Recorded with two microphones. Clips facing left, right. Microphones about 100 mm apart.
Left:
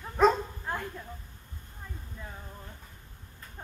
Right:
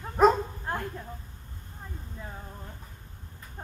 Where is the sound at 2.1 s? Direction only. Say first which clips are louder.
Right 3 dB; 15° right (ahead or behind).